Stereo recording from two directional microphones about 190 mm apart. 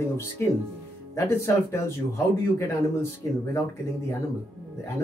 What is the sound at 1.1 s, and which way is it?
Speech, 15° left (ahead or behind).